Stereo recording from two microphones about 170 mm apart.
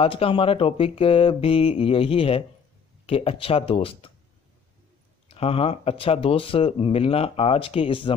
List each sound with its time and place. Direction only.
0.0 s speech: 35° left (ahead or behind)
5.3 s speech: 35° left (ahead or behind)